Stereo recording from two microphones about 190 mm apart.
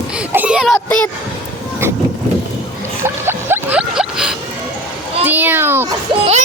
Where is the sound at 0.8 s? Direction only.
5° left (ahead or behind).